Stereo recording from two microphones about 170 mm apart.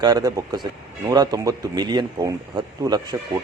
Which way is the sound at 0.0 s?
20° right (ahead or behind).